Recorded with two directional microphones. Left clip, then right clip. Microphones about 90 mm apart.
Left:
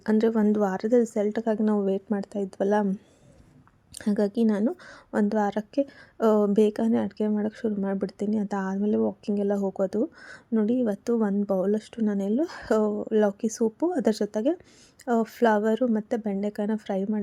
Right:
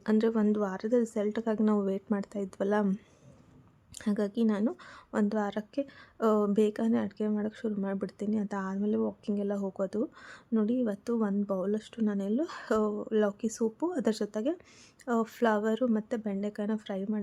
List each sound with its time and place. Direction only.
0.0 s a woman's voice: 35° left (ahead or behind)
3.9 s a woman's voice: 40° left (ahead or behind)